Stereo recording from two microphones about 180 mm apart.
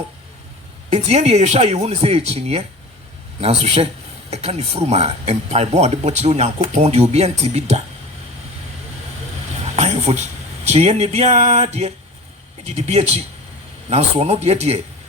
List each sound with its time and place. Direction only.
0.9 s speech: 35° right (ahead or behind)
9.7 s a sound: 35° right (ahead or behind)
10.7 s speech: 35° right (ahead or behind)